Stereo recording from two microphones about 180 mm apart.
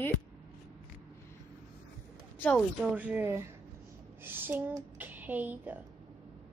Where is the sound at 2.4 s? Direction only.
5° left (ahead or behind).